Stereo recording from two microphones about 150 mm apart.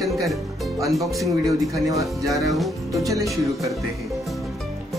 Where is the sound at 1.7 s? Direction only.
20° right (ahead or behind).